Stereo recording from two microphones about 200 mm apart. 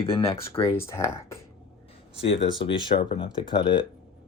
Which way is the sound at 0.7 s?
15° left (ahead or behind).